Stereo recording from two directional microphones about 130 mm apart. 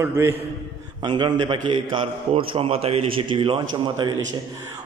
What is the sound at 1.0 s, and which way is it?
A man's voice, 35° right (ahead or behind).